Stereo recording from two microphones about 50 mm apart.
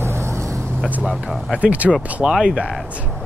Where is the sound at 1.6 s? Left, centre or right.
Right.